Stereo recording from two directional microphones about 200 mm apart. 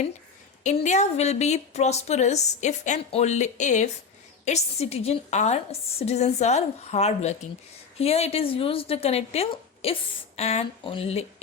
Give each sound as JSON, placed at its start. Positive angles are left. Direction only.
{"t": 0.6, "sound": "a woman's voice", "side_deg": 35}